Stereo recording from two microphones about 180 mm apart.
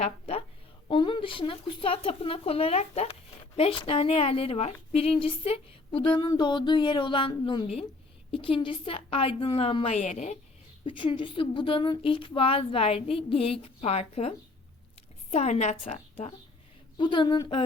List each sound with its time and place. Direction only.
0.0 s a sound: 35° left (ahead or behind)
0.9 s a woman's voice: 30° left (ahead or behind)
10.8 s a woman's voice: 30° left (ahead or behind)
17.0 s a woman's voice: 25° left (ahead or behind)